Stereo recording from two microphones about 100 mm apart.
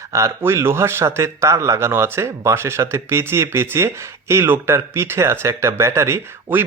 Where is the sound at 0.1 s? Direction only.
30° right (ahead or behind).